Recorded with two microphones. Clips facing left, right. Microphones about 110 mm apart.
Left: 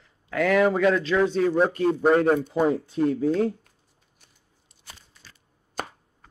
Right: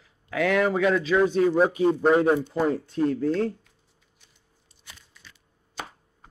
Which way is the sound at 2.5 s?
5° left (ahead or behind).